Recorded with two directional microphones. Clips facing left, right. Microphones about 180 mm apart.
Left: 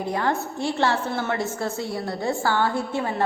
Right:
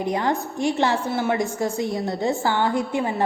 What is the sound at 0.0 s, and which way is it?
A woman's voice, 15° right (ahead or behind).